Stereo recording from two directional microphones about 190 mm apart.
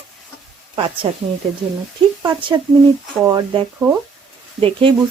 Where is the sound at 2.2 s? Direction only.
20° right (ahead or behind).